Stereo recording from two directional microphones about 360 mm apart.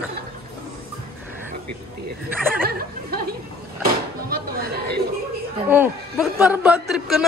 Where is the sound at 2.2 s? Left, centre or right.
Centre.